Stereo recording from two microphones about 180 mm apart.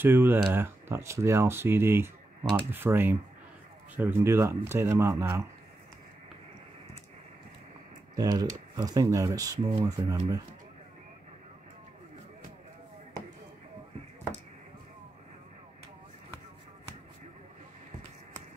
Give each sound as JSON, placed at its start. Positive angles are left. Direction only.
{"t": 0.0, "sound": "speech", "side_deg": -10}
{"t": 8.2, "sound": "speech", "side_deg": -20}